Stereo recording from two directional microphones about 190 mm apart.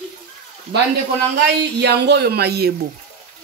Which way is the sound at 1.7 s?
60° right (ahead or behind).